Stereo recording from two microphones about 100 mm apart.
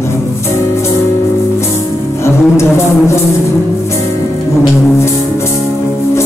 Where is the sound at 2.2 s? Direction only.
25° left (ahead or behind).